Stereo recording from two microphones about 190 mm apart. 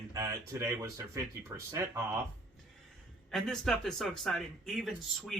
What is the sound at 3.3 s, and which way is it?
Speech, centre (ahead or behind).